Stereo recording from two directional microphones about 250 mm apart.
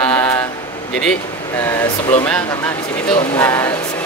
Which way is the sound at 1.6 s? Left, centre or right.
Centre.